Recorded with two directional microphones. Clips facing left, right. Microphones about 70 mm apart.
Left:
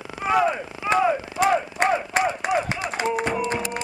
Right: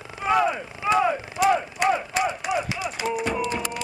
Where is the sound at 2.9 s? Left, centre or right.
Left.